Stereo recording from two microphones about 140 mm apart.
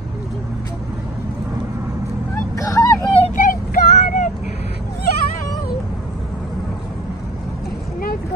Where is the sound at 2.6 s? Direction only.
25° left (ahead or behind).